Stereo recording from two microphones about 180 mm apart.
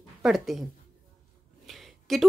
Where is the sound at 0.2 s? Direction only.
Centre (ahead or behind).